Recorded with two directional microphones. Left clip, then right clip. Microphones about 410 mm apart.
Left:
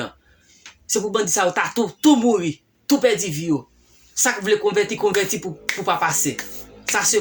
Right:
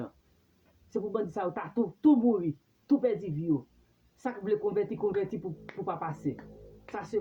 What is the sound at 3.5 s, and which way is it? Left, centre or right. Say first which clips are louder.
Speech: left 7 dB; right.